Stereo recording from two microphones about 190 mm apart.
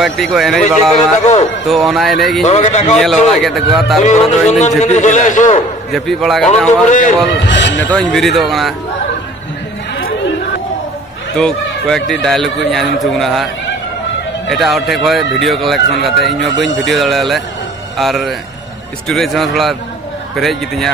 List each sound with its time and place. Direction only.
0.0 s speech: centre (ahead or behind)
2.4 s a man's voice: 35° left (ahead or behind)
3.0 s speech: centre (ahead or behind)
4.0 s a man's voice: 40° left (ahead or behind)
5.9 s speech: centre (ahead or behind)
6.9 s a man's voice: 40° left (ahead or behind)
7.4 s speech: 70° left (ahead or behind)
7.8 s speech: 5° left (ahead or behind)
11.3 s speech: 5° left (ahead or behind)
14.5 s speech: centre (ahead or behind)